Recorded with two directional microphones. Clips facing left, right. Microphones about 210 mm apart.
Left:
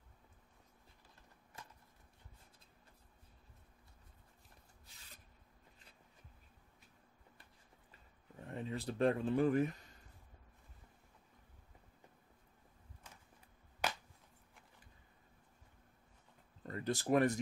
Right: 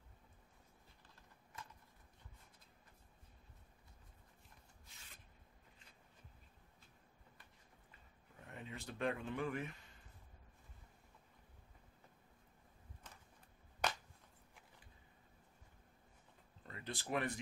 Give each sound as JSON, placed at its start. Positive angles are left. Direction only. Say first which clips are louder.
{"t": 8.5, "sound": "speech", "louder": "left 9 dB", "side_deg": 35}
{"t": 13.8, "sound": "a sound", "louder": "left 1 dB", "side_deg": 5}
{"t": 16.6, "sound": "speech", "louder": "left 10 dB", "side_deg": 40}